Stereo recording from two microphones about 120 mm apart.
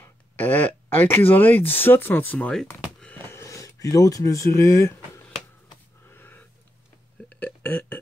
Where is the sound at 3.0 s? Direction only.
10° left (ahead or behind).